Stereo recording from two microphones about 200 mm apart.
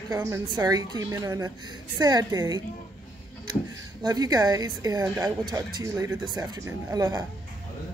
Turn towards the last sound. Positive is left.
turn(degrees=-20)  # may be behind; listen again after turning